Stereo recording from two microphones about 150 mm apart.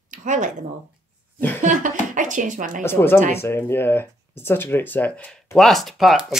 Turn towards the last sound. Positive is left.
turn(degrees=0)  # may be behind; listen again after turning